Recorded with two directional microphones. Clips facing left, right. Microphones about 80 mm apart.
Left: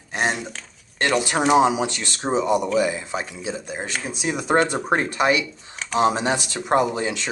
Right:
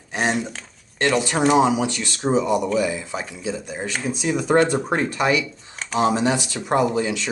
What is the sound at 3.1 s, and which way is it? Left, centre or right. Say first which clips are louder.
Speech: even; centre.